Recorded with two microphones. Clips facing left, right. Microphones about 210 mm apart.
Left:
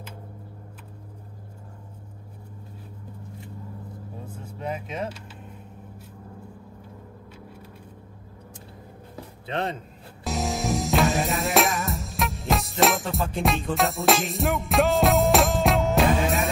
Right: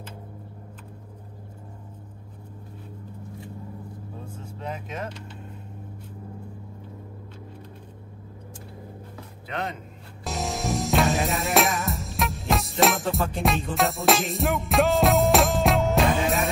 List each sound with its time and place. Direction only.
4.6 s speech: 10° left (ahead or behind)
9.5 s speech: 30° left (ahead or behind)
10.2 s music: centre (ahead or behind)